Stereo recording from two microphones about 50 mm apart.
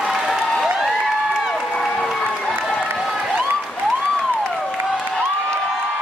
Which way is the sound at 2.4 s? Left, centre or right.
Centre.